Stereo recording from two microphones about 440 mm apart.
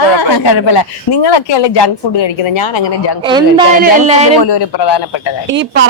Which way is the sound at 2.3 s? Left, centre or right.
Left.